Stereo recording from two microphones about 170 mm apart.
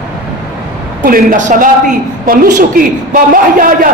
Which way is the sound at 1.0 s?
50° right (ahead or behind).